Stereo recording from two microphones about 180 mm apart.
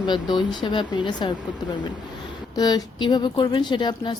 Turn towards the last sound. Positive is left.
turn(degrees=25)  # may be behind; listen again after turning